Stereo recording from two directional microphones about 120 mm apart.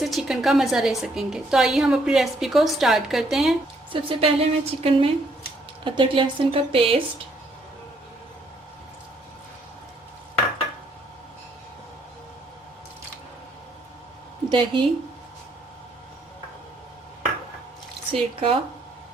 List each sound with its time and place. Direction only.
0.0 s a woman's voice: centre (ahead or behind)
3.9 s speech: 50° right (ahead or behind)
14.5 s speech: 45° right (ahead or behind)
18.1 s speech: 50° right (ahead or behind)